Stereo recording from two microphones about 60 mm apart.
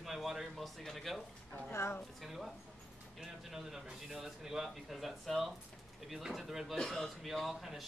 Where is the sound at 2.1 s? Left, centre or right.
Centre.